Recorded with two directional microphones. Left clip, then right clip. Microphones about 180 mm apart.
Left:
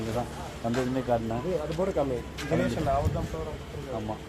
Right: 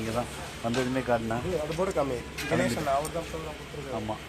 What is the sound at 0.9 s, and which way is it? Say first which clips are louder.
Speech: even; 25° right (ahead or behind).